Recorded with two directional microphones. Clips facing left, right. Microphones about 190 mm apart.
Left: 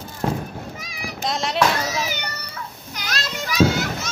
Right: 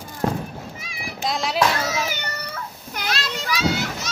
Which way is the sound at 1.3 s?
Centre (ahead or behind).